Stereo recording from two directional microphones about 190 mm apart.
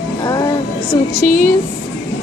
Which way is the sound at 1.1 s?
45° left (ahead or behind).